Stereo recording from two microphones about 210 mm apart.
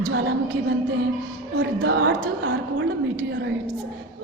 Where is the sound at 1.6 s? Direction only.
60° right (ahead or behind).